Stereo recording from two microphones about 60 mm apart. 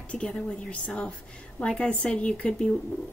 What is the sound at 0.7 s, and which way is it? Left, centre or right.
Speech, left.